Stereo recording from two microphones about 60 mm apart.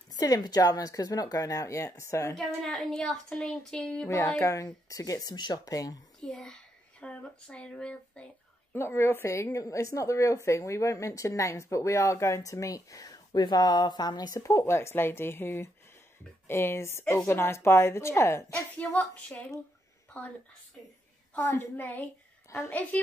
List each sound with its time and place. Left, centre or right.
0.1 s a woman's voice: left
2.3 s speech: centre
4.4 s speech: left
6.2 s speech: centre
8.7 s a woman's voice: left
18.8 s a woman's voice: left
21.4 s a woman's voice: left